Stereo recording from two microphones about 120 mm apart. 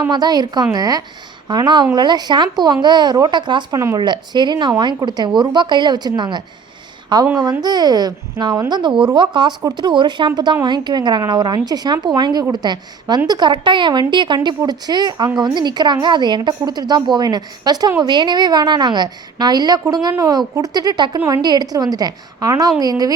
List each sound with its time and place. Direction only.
0.1 s speech: 35° right (ahead or behind)
3.8 s speech: 25° right (ahead or behind)
4.0 s speech: 40° right (ahead or behind)